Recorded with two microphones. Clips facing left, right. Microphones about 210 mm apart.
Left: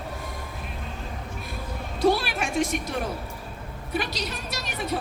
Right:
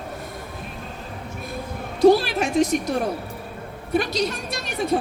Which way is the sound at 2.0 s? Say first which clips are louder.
Right 7 dB; 40° right (ahead or behind).